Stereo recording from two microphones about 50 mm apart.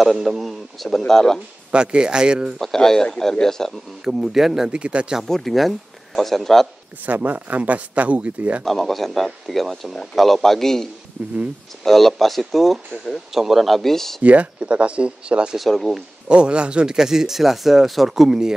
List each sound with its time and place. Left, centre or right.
0.0 s speech: centre
1.7 s speech: centre
2.6 s speech: centre
4.0 s speech: centre
4.6 s speech: right
5.2 s speech: centre
7.1 s speech: right
8.6 s speech: centre
14.2 s speech: right
15.5 s speech: centre
16.3 s speech: right